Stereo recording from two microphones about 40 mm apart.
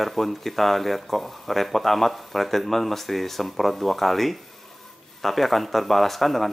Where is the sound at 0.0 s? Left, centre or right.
Centre.